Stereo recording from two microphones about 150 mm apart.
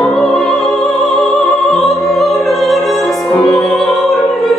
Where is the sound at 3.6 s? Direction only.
Centre (ahead or behind).